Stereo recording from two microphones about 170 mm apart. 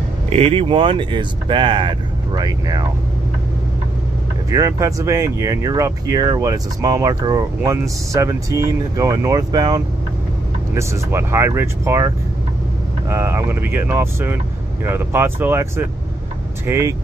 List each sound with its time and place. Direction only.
0.3 s speech: 35° right (ahead or behind)
4.5 s speech: 20° right (ahead or behind)
13.1 s speech: 15° right (ahead or behind)